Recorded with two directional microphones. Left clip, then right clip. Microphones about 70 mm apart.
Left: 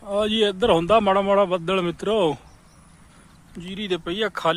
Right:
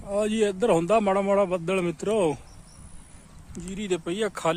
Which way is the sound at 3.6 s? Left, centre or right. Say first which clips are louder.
Left 2 dB; centre.